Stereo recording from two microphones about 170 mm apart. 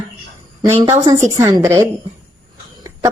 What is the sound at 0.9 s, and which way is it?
A woman's voice, 20° right (ahead or behind).